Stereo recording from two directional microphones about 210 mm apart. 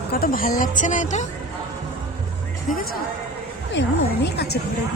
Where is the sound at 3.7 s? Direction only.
55° left (ahead or behind).